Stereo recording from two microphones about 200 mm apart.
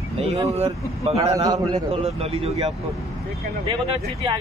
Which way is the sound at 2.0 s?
30° right (ahead or behind).